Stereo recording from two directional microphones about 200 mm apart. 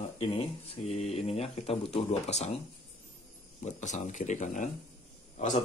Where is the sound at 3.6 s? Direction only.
35° left (ahead or behind).